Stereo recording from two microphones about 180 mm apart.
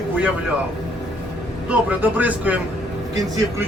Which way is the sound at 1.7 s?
10° right (ahead or behind).